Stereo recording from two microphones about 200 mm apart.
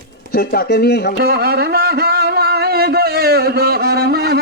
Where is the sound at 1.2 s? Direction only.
50° right (ahead or behind).